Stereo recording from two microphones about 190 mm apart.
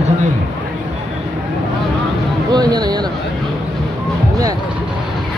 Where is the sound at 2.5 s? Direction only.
20° right (ahead or behind).